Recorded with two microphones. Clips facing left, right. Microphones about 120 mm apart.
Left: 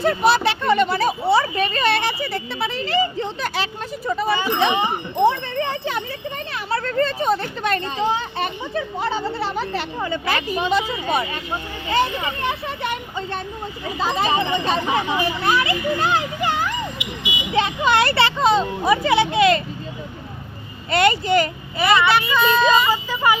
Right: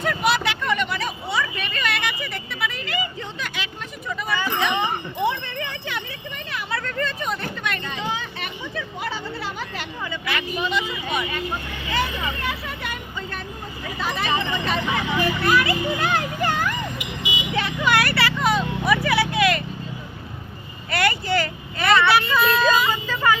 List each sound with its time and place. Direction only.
0.0 s a sound: 35° left (ahead or behind)
4.4 s speech: 20° left (ahead or behind)
5.1 s speech: 35° left (ahead or behind)
6.5 s a sound: 35° left (ahead or behind)
7.6 s speech: 35° left (ahead or behind)
20.9 s speech: 25° left (ahead or behind)
21.8 s speech: centre (ahead or behind)
22.9 s vehicle: 10° left (ahead or behind)